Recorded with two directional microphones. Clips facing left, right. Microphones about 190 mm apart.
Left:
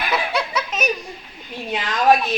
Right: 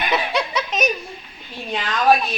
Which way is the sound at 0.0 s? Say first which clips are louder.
Right 1 dB; 5° left (ahead or behind).